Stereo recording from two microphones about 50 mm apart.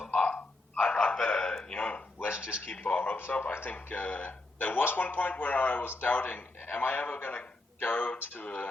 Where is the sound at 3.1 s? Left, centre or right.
Left.